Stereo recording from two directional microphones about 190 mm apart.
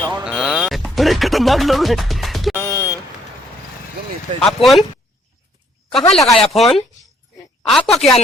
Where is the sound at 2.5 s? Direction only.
15° left (ahead or behind).